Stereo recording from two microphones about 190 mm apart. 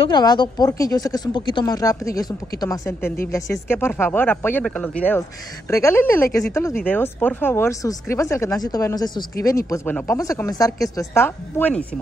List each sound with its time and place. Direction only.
0.0 s speech: 20° left (ahead or behind)